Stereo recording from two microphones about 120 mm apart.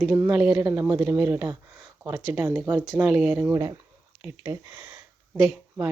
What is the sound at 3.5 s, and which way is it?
Speech, 25° right (ahead or behind).